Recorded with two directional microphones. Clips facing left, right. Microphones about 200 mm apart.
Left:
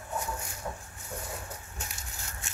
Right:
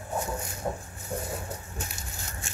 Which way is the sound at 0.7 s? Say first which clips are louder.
Right 8 dB; 40° right (ahead or behind).